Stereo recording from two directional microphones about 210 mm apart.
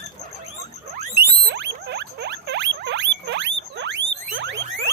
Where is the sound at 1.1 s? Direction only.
50° right (ahead or behind).